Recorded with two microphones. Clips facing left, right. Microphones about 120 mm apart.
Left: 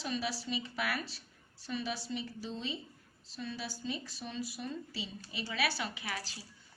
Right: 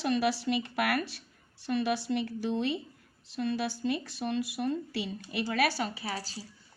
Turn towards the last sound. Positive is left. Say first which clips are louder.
# right 4 dB
turn(degrees=-35)  # may be behind; listen again after turning